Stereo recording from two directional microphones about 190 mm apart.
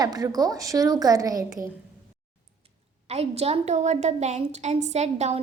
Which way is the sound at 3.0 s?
35° right (ahead or behind).